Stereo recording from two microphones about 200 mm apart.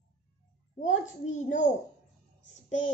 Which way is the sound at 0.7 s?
35° left (ahead or behind).